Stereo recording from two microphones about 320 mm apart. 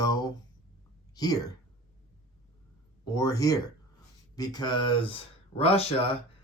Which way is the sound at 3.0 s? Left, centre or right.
Centre.